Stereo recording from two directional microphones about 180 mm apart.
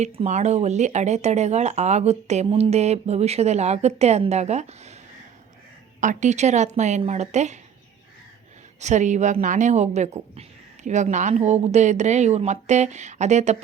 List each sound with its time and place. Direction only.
0.0 s speech: 40° right (ahead or behind)
6.0 s speech: 45° right (ahead or behind)
8.8 s speech: 40° right (ahead or behind)